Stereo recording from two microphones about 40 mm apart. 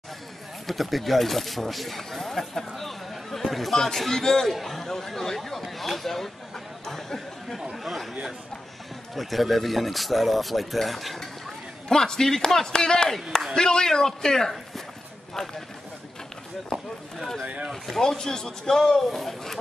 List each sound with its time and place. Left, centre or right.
0.7 s a man's voice: centre
4.5 s speech: centre
11.9 s a man's voice: centre
17.8 s a man's voice: centre